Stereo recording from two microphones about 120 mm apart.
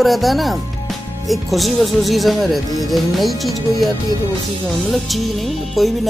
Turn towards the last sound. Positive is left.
turn(degrees=0)  # may be behind; listen again after turning